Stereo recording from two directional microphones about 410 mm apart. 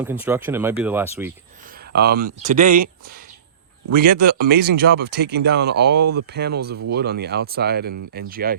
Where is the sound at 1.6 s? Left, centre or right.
Right.